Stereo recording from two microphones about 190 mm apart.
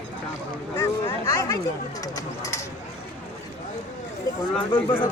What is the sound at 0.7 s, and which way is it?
Speech, 15° left (ahead or behind).